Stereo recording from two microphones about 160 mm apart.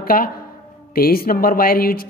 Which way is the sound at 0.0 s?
65° left (ahead or behind).